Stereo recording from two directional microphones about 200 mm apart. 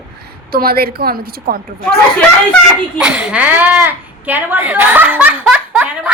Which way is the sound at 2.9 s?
5° right (ahead or behind).